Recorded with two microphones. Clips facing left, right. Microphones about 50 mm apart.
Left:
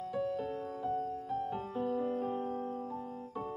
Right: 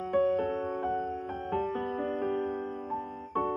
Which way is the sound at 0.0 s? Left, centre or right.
Right.